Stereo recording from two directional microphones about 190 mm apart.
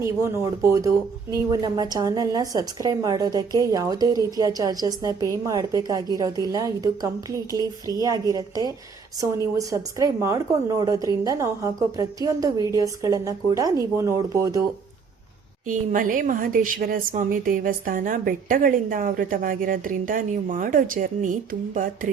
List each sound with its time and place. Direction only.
0.0 s a woman's voice: 15° right (ahead or behind)
15.6 s a woman's voice: 45° right (ahead or behind)